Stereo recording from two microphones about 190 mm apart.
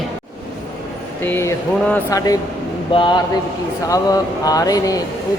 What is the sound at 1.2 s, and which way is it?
Speech, 10° left (ahead or behind).